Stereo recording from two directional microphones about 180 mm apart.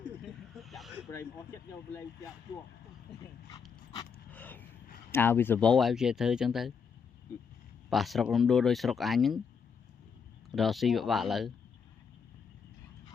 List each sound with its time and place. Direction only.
0.2 s snake: centre (ahead or behind)
4.3 s a sound: 10° left (ahead or behind)
5.1 s speech: 10° left (ahead or behind)
7.9 s speech: centre (ahead or behind)
10.5 s speech: centre (ahead or behind)